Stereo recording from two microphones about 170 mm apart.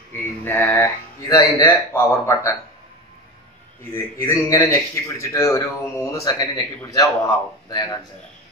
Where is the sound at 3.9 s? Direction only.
15° left (ahead or behind).